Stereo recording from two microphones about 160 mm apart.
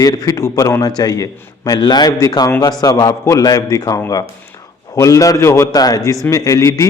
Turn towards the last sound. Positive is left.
turn(degrees=20)  # may be behind; listen again after turning